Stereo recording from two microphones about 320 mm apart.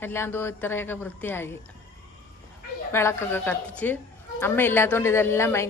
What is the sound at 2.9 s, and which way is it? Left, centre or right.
A woman's voice, centre.